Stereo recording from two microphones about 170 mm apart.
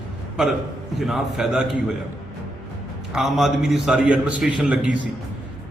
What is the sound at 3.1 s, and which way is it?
A man's voice, centre (ahead or behind).